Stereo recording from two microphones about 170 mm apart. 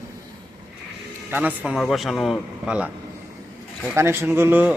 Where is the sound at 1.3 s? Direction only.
10° right (ahead or behind).